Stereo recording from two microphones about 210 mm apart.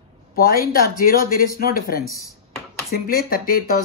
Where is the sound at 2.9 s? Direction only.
45° left (ahead or behind).